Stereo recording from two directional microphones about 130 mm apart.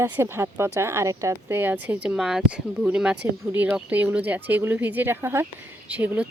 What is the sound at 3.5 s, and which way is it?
Speech, 15° right (ahead or behind).